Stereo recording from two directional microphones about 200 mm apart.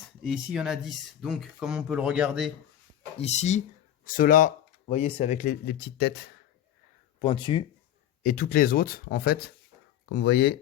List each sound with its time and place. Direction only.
0.2 s speech: 5° right (ahead or behind)
3.2 s speech: 35° left (ahead or behind); by 6.3 s 55° left (ahead or behind)
7.2 s speech: 25° left (ahead or behind)
8.2 s speech: 45° left (ahead or behind)